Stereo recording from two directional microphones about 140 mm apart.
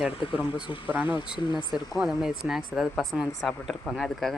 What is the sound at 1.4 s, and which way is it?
Speech, 35° left (ahead or behind).